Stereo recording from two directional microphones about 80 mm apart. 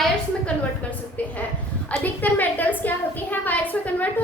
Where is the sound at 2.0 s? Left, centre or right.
Left.